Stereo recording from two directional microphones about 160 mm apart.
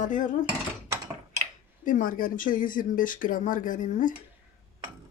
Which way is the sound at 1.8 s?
55° left (ahead or behind).